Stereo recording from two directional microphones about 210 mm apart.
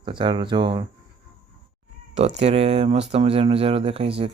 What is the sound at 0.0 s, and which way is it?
Speech, 20° right (ahead or behind).